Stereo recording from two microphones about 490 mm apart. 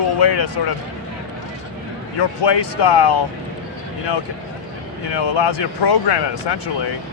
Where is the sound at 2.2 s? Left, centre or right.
Left.